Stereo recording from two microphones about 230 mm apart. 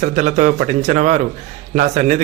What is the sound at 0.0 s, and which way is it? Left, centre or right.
Speech, right.